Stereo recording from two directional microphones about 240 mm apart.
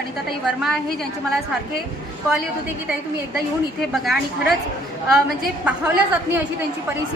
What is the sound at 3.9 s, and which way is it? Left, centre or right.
A woman's voice, centre.